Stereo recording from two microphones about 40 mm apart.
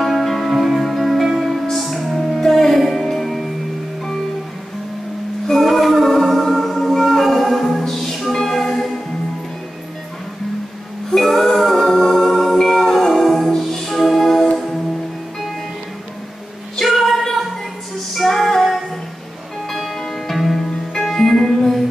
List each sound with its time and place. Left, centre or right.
0.0 s music: centre
5.5 s music: centre
11.1 s music: centre
16.7 s music: centre